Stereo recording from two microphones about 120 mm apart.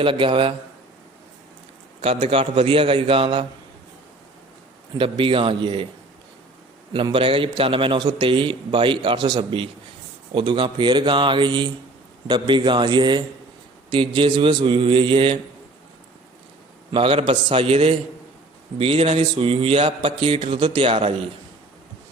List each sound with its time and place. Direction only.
0.0 s a man's voice: 45° right (ahead or behind)
2.0 s a man's voice: 55° right (ahead or behind)
4.9 s a man's voice: 45° right (ahead or behind)
6.9 s a man's voice: 45° right (ahead or behind)
16.9 s a man's voice: 50° right (ahead or behind)